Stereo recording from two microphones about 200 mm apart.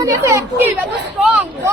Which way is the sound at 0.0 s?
15° right (ahead or behind).